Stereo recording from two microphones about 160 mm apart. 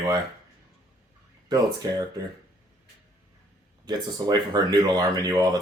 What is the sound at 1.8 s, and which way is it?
Speech, 25° right (ahead or behind).